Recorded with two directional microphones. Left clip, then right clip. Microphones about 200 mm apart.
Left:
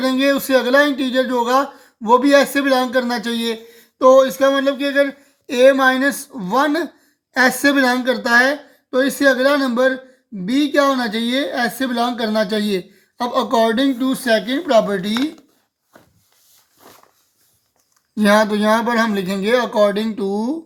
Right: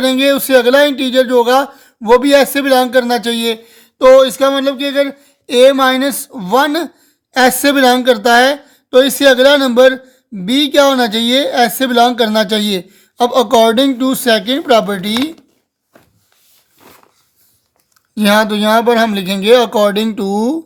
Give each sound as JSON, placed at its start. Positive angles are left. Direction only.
{"t": 0.0, "sound": "speech", "side_deg": -25}
{"t": 18.1, "sound": "speech", "side_deg": -30}